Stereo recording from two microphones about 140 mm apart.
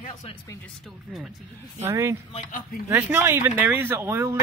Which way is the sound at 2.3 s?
60° left (ahead or behind).